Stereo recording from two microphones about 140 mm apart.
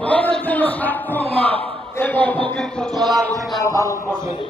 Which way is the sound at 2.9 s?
30° right (ahead or behind).